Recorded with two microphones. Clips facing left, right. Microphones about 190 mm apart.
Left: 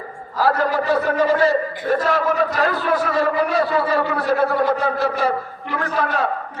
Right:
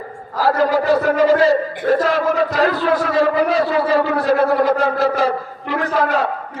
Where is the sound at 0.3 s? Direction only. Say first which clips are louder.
Right 3 dB; 90° right.